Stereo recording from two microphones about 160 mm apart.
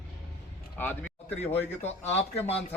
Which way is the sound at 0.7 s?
10° left (ahead or behind).